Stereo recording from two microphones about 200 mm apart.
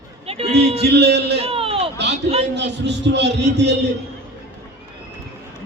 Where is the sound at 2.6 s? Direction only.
60° right (ahead or behind).